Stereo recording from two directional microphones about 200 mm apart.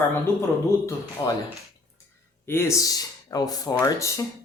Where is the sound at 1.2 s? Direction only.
20° left (ahead or behind).